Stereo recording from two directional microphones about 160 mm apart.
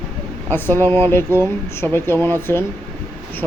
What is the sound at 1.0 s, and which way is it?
Speech, 15° left (ahead or behind).